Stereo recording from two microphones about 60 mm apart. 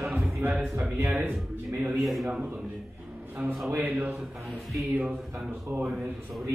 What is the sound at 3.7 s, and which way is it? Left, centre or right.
Speech, right.